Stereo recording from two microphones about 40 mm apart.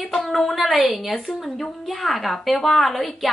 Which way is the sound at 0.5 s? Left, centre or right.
Centre.